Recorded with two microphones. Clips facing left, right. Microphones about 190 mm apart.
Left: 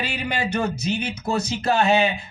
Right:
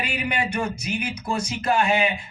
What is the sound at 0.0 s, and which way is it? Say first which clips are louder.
Speech: even; 25° left (ahead or behind).